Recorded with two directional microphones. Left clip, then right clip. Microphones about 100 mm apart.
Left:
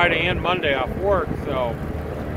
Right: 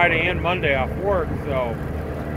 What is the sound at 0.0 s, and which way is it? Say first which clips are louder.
Speech: even; 45° left (ahead or behind).